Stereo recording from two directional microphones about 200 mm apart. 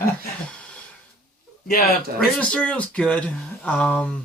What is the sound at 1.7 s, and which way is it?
Speech, 50° left (ahead or behind).